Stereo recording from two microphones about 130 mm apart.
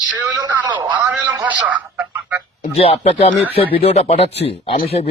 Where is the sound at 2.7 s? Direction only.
50° left (ahead or behind).